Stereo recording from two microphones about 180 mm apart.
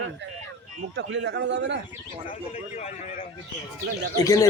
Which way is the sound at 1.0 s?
75° right (ahead or behind).